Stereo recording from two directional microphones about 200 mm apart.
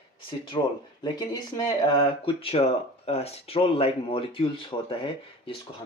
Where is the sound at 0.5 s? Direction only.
25° left (ahead or behind).